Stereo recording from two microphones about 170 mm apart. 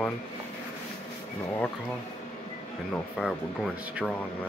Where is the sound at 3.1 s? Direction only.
Centre (ahead or behind).